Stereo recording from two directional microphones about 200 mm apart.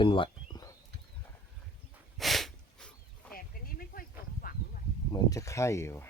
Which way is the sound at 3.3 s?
45° left (ahead or behind).